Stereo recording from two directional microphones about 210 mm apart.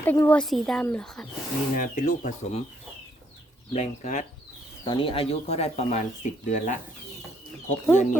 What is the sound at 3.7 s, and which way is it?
Speech, 35° left (ahead or behind).